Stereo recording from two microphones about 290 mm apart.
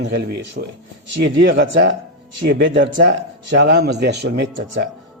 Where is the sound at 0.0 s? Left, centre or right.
Right.